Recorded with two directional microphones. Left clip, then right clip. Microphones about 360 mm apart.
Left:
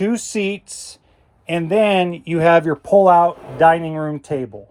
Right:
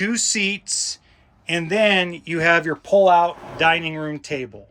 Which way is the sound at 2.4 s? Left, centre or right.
Centre.